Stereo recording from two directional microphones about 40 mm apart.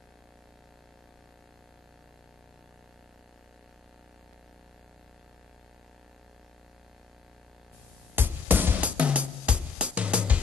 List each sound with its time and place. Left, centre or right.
8.2 s music: right
8.8 s music: right